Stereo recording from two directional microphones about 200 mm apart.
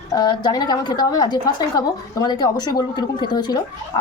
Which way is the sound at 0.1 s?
20° left (ahead or behind).